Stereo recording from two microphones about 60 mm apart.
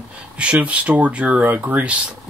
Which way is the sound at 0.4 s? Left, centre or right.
Right.